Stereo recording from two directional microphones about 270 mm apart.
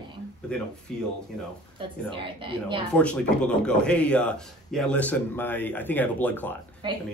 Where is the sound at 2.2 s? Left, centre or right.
Centre.